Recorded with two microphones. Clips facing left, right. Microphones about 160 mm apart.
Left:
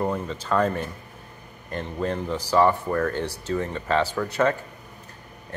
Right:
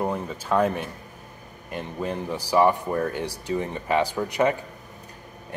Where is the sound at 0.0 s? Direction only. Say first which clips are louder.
Left 1 dB; 10° right (ahead or behind).